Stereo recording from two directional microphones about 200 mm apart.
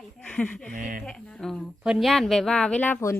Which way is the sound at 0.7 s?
40° right (ahead or behind).